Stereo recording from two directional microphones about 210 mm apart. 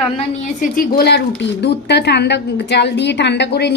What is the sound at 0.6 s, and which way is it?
A woman's voice, 45° left (ahead or behind).